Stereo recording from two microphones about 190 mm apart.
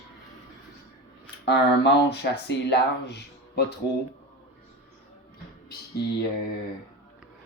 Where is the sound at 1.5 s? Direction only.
65° left (ahead or behind).